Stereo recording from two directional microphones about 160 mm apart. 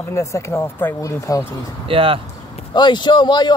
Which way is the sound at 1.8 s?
35° right (ahead or behind).